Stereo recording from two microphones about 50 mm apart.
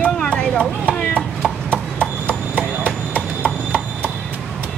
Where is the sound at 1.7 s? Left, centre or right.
Left.